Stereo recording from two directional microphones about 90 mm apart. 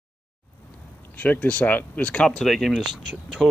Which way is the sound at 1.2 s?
15° left (ahead or behind).